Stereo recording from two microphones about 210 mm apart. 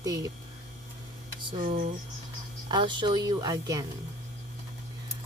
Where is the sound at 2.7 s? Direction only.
20° right (ahead or behind).